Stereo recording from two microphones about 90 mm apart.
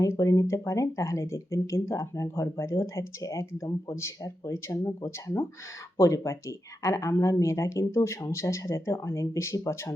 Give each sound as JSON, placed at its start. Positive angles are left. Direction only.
{"t": 0.0, "sound": "speech", "side_deg": 35}